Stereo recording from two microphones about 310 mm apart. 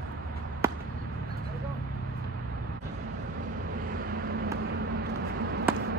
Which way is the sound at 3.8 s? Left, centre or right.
Right.